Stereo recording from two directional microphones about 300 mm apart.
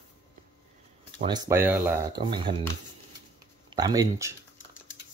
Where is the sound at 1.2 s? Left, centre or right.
Centre.